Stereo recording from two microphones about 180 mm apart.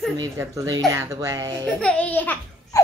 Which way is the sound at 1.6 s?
5° left (ahead or behind).